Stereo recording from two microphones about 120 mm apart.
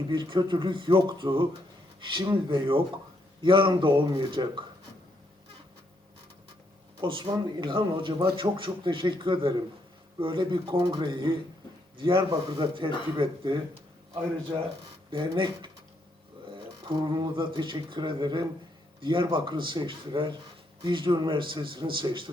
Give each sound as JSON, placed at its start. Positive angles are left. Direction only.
{"t": 0.1, "sound": "speech", "side_deg": -40}
{"t": 7.0, "sound": "speech", "side_deg": -45}
{"t": 15.1, "sound": "speech", "side_deg": -40}
{"t": 16.9, "sound": "speech", "side_deg": -40}